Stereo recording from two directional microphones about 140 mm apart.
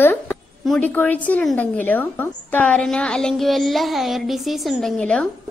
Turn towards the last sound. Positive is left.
turn(degrees=5)  # may be behind; listen again after turning